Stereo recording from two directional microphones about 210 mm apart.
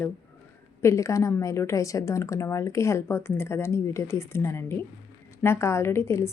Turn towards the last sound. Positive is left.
turn(degrees=15)  # may be behind; listen again after turning